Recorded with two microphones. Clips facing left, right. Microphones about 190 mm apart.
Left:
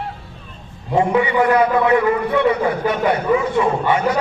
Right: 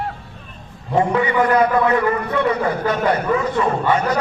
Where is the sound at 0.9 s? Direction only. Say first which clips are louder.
Left 1 dB; 15° left (ahead or behind).